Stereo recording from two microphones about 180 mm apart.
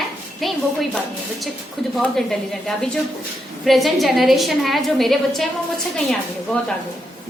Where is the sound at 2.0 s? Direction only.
Centre (ahead or behind).